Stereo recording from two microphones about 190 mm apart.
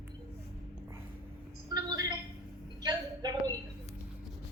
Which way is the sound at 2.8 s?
20° right (ahead or behind).